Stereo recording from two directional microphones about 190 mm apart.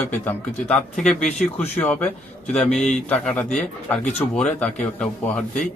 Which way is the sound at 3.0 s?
5° left (ahead or behind).